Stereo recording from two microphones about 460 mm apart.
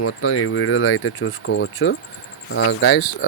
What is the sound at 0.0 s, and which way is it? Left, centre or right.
Speech, left.